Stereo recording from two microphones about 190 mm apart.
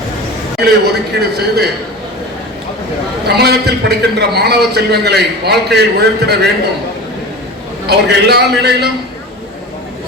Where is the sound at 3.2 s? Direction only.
60° right (ahead or behind).